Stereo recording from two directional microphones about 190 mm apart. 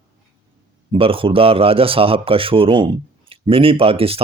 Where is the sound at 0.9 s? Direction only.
30° right (ahead or behind).